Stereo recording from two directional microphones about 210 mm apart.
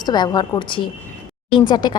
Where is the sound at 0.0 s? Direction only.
20° left (ahead or behind).